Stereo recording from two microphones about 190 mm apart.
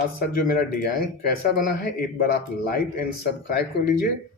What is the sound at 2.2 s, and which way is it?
Speech, 50° left (ahead or behind).